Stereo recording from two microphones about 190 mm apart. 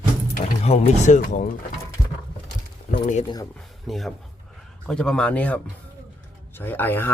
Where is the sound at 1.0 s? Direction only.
40° left (ahead or behind).